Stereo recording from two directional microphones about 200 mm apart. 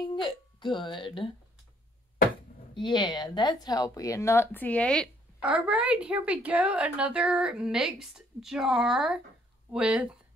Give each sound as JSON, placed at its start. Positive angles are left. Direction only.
{"t": 0.1, "sound": "speech", "side_deg": 25}
{"t": 2.7, "sound": "speech", "side_deg": 25}
{"t": 5.4, "sound": "a woman's voice", "side_deg": -5}